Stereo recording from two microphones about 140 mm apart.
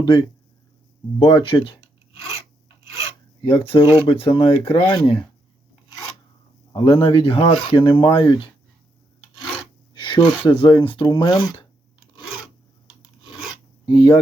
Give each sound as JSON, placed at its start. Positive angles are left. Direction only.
{"t": 0.0, "sound": "speech", "side_deg": 35}
{"t": 1.8, "sound": "filing", "side_deg": -20}
{"t": 3.4, "sound": "speech", "side_deg": 40}
{"t": 6.7, "sound": "speech", "side_deg": 40}
{"t": 9.9, "sound": "speech", "side_deg": 35}
{"t": 13.8, "sound": "speech", "side_deg": 30}